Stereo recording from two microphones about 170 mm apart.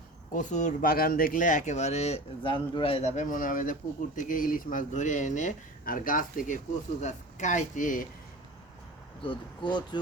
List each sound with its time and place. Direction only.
0.3 s speech: 45° left (ahead or behind)
9.2 s speech: 30° left (ahead or behind)